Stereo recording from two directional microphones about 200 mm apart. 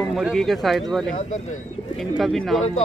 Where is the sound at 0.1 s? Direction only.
Centre (ahead or behind).